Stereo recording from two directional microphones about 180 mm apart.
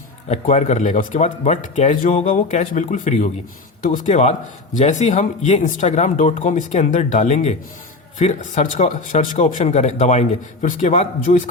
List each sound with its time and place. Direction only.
0.3 s speech: 40° left (ahead or behind)